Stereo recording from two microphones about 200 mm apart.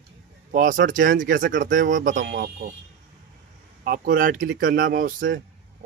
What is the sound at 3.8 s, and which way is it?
A man's voice, 50° right (ahead or behind).